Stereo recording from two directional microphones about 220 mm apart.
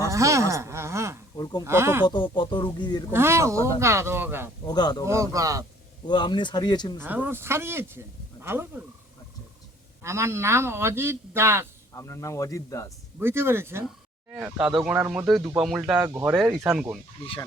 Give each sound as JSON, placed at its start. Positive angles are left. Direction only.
{"t": 0.0, "sound": "a sound", "side_deg": -15}
{"t": 1.4, "sound": "speech", "side_deg": 20}
{"t": 1.6, "sound": "speech", "side_deg": -10}
{"t": 2.0, "sound": "speech", "side_deg": 20}
{"t": 3.1, "sound": "speech", "side_deg": -10}
{"t": 4.6, "sound": "speech", "side_deg": 20}
{"t": 5.0, "sound": "speech", "side_deg": -15}
{"t": 6.1, "sound": "speech", "side_deg": 20}
{"t": 7.0, "sound": "speech", "side_deg": -10}
{"t": 10.0, "sound": "speech", "side_deg": -10}
{"t": 11.9, "sound": "speech", "side_deg": 15}
{"t": 13.1, "sound": "speech", "side_deg": -10}
{"t": 16.0, "sound": "speech", "side_deg": -10}
{"t": 16.3, "sound": "speech", "side_deg": 0}